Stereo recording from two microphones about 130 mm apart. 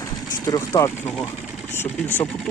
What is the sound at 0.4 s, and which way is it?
Speech, 25° left (ahead or behind).